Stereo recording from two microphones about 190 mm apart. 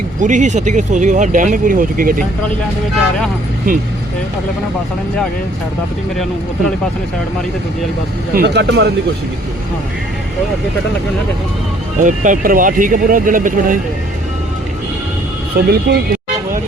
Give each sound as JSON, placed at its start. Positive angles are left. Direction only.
{"t": 0.2, "sound": "speech", "side_deg": -40}
{"t": 8.4, "sound": "a man's voice", "side_deg": -65}
{"t": 12.0, "sound": "speech", "side_deg": -40}
{"t": 15.5, "sound": "a man's voice", "side_deg": -55}